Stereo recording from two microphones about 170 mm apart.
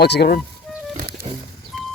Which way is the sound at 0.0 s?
75° left (ahead or behind).